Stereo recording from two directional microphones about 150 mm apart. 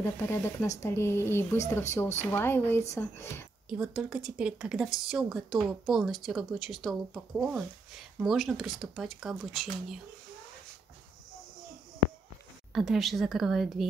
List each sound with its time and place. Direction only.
0.0 s a woman's voice: 15° left (ahead or behind)
3.6 s speech: 5° right (ahead or behind)
12.7 s speech: centre (ahead or behind)